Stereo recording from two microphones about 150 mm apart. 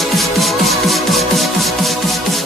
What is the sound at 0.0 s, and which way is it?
Music, centre (ahead or behind).